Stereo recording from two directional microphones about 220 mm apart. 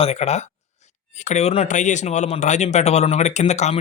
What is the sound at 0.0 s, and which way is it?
Speech, 30° left (ahead or behind).